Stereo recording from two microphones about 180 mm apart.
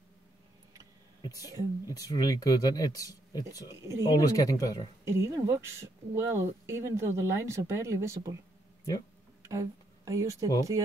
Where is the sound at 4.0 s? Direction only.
20° left (ahead or behind).